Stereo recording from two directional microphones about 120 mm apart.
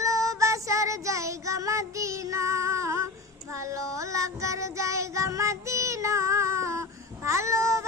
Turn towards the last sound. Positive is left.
turn(degrees=-25)  # may be behind; listen again after turning